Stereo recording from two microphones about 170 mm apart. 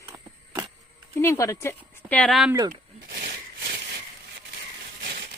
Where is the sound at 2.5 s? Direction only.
20° right (ahead or behind).